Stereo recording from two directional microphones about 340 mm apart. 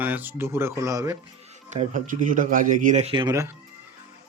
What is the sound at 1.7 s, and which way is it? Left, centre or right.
Speech, right.